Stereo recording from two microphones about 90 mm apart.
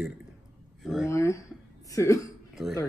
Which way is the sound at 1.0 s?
30° left (ahead or behind).